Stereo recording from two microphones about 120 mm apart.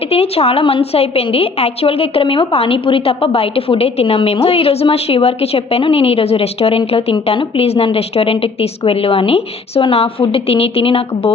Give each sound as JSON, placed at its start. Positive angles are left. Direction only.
{"t": 0.1, "sound": "a woman's voice", "side_deg": 55}